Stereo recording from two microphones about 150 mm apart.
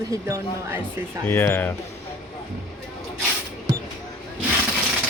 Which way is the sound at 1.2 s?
15° left (ahead or behind).